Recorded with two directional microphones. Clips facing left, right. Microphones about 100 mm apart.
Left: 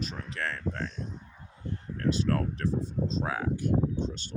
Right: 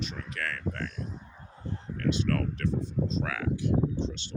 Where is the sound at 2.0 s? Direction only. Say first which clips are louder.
Even; 35° left (ahead or behind).